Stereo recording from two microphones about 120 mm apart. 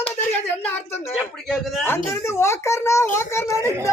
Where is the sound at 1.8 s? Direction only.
20° left (ahead or behind).